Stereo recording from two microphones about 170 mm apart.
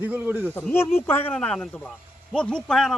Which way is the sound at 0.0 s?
10° right (ahead or behind).